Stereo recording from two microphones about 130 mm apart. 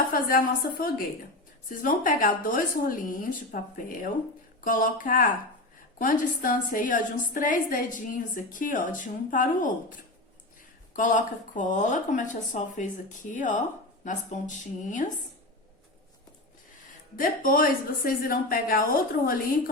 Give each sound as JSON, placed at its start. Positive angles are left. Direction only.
{"t": 0.1, "sound": "a woman's voice", "side_deg": 90}
{"t": 10.9, "sound": "speech", "side_deg": 85}
{"t": 17.2, "sound": "a woman's voice", "side_deg": 90}